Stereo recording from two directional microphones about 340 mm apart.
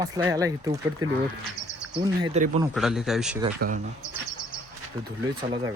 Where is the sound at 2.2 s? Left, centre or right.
Centre.